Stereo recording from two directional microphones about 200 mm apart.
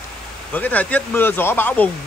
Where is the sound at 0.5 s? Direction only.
10° left (ahead or behind).